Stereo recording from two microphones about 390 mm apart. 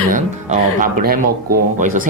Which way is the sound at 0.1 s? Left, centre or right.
Right.